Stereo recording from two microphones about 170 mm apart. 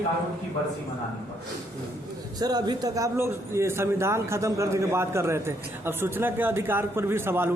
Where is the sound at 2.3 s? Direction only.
25° right (ahead or behind).